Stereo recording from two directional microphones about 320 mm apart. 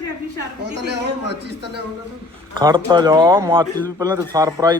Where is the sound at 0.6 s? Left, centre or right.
Right.